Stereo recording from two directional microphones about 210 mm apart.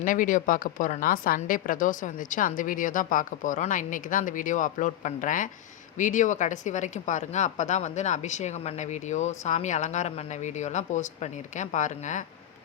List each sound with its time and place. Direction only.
0.0 s a woman's voice: 40° left (ahead or behind)